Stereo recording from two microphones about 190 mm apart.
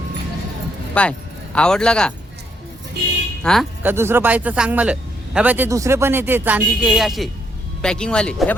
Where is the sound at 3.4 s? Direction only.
5° left (ahead or behind).